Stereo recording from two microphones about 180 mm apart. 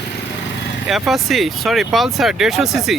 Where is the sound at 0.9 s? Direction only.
Centre (ahead or behind).